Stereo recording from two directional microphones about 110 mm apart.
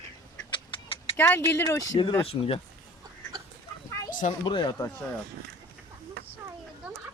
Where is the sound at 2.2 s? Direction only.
55° left (ahead or behind).